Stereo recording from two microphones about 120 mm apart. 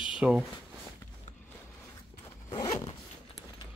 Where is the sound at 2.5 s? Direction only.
35° left (ahead or behind).